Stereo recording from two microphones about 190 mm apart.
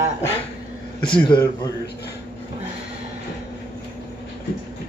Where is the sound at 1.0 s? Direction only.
5° left (ahead or behind).